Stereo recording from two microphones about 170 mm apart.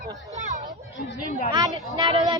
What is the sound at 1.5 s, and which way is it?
Speech, 25° right (ahead or behind).